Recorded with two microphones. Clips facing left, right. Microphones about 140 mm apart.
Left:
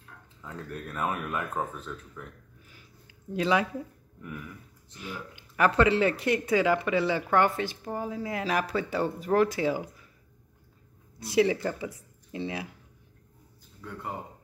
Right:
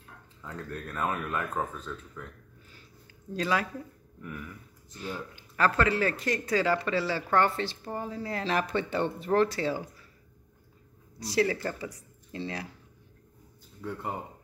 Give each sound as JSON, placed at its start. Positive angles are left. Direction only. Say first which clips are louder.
{"t": 0.7, "sound": "speech", "louder": "even", "side_deg": 15}
{"t": 3.1, "sound": "a sound", "louder": "left 3 dB", "side_deg": 15}
{"t": 4.9, "sound": "speech", "louder": "right 2 dB", "side_deg": 10}
{"t": 11.3, "sound": "speech", "louder": "left 3 dB", "side_deg": 15}
{"t": 13.8, "sound": "speech", "louder": "right 5 dB", "side_deg": -30}